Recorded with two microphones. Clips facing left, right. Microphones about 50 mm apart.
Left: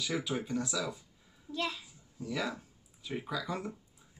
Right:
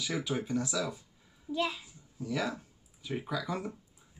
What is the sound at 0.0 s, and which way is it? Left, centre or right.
Speech, centre.